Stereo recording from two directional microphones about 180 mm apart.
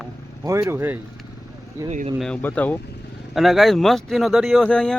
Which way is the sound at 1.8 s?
40° right (ahead or behind).